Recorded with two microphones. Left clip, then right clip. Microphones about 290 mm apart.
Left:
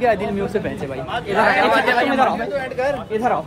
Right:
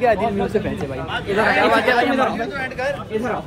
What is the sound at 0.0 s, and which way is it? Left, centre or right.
A man's voice, centre.